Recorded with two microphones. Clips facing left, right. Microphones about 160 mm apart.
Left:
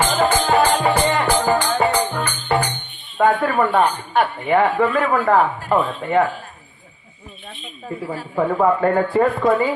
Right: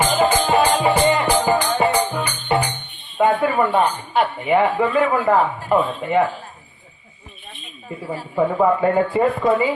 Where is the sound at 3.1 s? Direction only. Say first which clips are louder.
Even; 10° right (ahead or behind).